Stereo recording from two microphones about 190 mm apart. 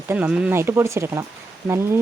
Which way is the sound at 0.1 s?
10° right (ahead or behind).